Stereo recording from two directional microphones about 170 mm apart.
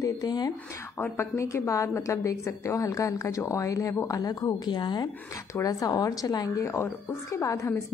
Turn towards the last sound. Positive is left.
turn(degrees=20)  # may be behind; listen again after turning